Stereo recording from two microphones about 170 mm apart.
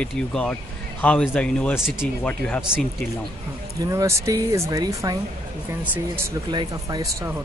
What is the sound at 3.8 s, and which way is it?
Speech, 20° right (ahead or behind).